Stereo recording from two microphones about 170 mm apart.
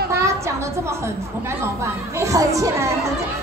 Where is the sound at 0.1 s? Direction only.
15° right (ahead or behind).